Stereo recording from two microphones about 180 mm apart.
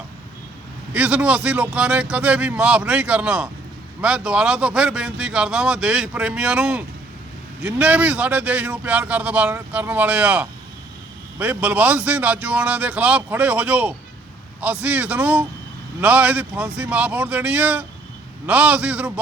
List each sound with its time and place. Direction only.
0.9 s speech: 5° right (ahead or behind)